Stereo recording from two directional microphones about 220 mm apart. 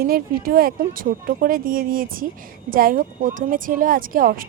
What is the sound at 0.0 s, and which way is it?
Speech, 40° right (ahead or behind).